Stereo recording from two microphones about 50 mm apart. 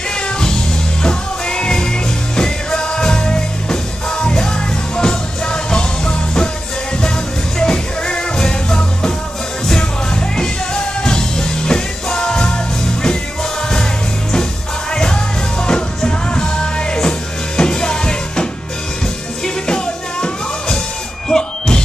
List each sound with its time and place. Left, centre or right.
0.1 s music: centre
7.5 s music: centre
10.3 s music: centre
14.9 s music: centre